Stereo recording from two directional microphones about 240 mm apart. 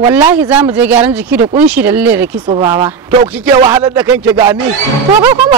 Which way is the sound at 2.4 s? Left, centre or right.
Centre.